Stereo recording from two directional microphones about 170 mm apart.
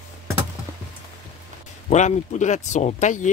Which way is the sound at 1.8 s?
45° left (ahead or behind).